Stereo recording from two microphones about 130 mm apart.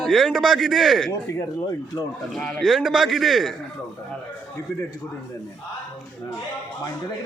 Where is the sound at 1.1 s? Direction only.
20° left (ahead or behind).